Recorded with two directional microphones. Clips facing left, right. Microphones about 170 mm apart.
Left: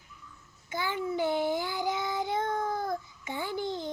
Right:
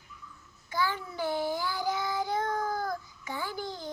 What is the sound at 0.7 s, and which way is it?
Child singing, 20° left (ahead or behind).